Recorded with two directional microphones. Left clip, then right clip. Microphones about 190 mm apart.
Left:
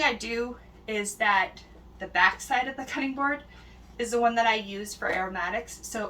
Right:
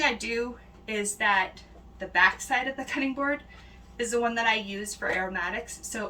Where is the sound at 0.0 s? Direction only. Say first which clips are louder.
Even; 10° right (ahead or behind).